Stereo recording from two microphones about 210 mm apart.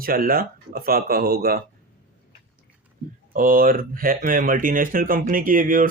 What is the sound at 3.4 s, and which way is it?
Speech, 40° right (ahead or behind).